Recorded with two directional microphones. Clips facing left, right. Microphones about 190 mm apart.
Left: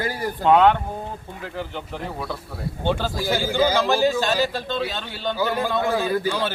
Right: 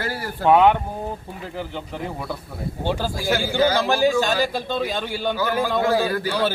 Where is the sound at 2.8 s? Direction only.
10° right (ahead or behind).